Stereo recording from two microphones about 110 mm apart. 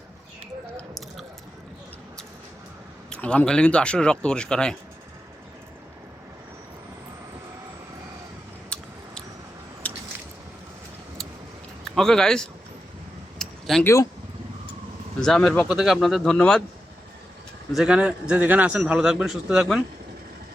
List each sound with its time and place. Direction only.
0.8 s squish: centre (ahead or behind)
3.1 s speech: 10° left (ahead or behind)
8.7 s a sound: 10° left (ahead or behind)
9.8 s squish: 15° left (ahead or behind)
11.9 s speech: 5° left (ahead or behind)
13.4 s a sound: 5° left (ahead or behind)
13.8 s speech: 30° left (ahead or behind)
15.2 s speech: 10° left (ahead or behind)
15.7 s speech: 5° right (ahead or behind)
17.7 s a man's voice: 5° right (ahead or behind)